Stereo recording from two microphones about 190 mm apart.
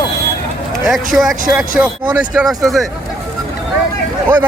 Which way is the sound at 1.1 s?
5° right (ahead or behind).